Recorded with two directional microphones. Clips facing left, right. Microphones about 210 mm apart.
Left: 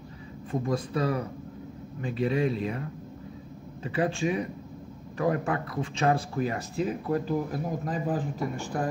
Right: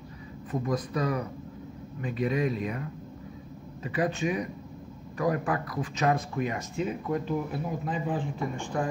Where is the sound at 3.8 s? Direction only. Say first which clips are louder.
Left 1 dB; 30° left (ahead or behind).